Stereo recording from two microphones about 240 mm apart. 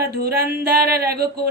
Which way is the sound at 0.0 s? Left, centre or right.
Right.